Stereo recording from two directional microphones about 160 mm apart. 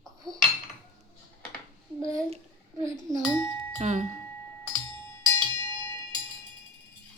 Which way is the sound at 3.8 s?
45° right (ahead or behind).